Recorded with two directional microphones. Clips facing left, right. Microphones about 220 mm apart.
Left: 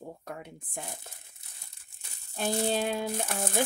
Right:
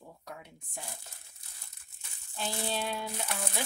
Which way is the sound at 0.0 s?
50° left (ahead or behind).